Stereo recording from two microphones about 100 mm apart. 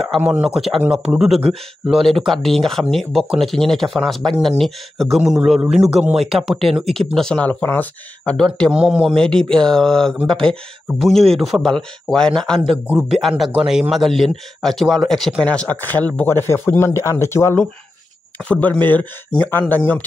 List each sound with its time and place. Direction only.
0.2 s speech: 10° right (ahead or behind); by 8.7 s 10° left (ahead or behind)
8.7 s speech: 5° right (ahead or behind); by 17.6 s 25° left (ahead or behind)
18.4 s speech: 15° left (ahead or behind)